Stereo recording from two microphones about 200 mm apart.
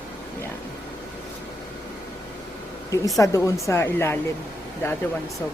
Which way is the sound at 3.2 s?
15° left (ahead or behind).